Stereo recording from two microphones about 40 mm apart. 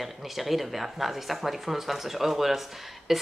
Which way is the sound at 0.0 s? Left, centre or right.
Centre.